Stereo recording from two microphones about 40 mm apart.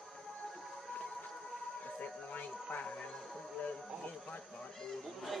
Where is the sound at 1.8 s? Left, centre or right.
Left.